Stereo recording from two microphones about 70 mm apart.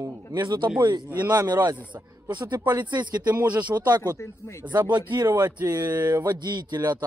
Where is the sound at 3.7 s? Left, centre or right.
Right.